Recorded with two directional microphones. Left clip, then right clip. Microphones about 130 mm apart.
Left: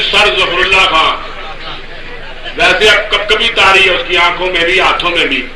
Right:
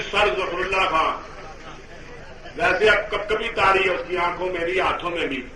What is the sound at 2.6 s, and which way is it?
A man's voice, 35° right (ahead or behind).